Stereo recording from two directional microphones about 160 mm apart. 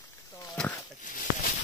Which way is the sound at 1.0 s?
55° left (ahead or behind).